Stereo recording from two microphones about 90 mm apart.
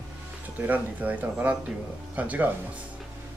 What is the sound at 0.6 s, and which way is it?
Speech, 20° right (ahead or behind).